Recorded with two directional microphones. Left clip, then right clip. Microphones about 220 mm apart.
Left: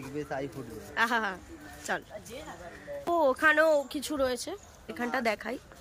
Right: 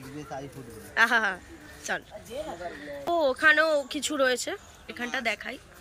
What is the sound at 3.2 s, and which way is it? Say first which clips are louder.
Speech: right 2 dB; 15° left (ahead or behind).